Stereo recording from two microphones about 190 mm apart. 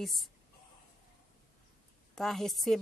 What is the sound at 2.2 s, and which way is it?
Speech, centre (ahead or behind).